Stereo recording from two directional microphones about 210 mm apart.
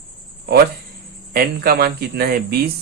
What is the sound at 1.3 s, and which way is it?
Speech, 45° right (ahead or behind).